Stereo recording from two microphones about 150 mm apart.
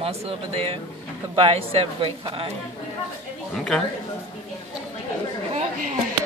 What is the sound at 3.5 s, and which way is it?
Speech, 5° left (ahead or behind).